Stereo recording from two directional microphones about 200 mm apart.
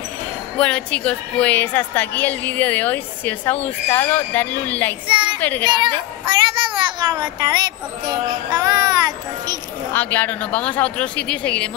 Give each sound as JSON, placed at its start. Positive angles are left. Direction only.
{"t": 0.6, "sound": "a woman's voice", "side_deg": 5}
{"t": 5.0, "sound": "a child's voice", "side_deg": -25}
{"t": 5.4, "sound": "a woman's voice", "side_deg": 10}
{"t": 5.9, "sound": "a child's voice", "side_deg": -25}
{"t": 9.9, "sound": "a woman's voice", "side_deg": 10}